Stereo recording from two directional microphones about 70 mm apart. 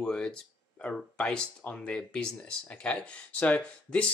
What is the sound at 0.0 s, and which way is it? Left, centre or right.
Speech, centre.